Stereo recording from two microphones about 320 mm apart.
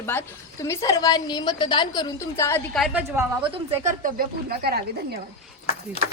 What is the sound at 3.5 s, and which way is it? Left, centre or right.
Speech, centre.